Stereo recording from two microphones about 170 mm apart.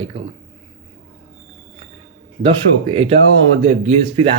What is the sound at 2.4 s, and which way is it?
Speech, 35° right (ahead or behind).